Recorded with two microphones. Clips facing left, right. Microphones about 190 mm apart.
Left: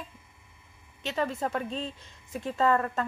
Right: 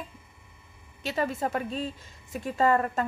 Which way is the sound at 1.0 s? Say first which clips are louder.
Right 1 dB; 5° right (ahead or behind).